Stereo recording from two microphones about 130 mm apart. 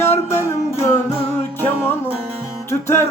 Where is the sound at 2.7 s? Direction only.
20° left (ahead or behind).